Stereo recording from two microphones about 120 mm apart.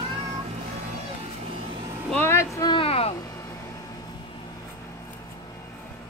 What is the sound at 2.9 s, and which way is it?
Music, 55° left (ahead or behind).